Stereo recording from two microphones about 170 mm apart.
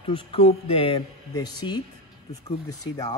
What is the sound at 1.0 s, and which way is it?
Speech, 25° left (ahead or behind).